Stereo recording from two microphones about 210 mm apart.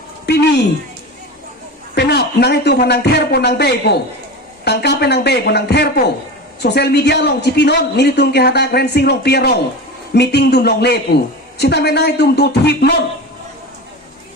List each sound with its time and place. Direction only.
0.3 s speech: 50° left (ahead or behind)
2.0 s speech: 50° left (ahead or behind)